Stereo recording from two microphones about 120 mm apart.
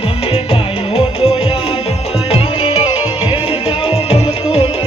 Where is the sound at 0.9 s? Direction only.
50° left (ahead or behind).